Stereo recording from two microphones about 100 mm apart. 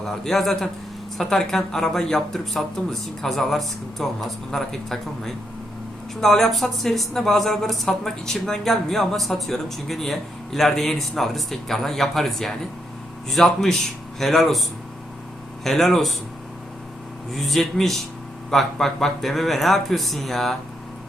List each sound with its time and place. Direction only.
0.0 s speech: 5° left (ahead or behind)
15.6 s speech: 5° left (ahead or behind)
17.3 s speech: centre (ahead or behind)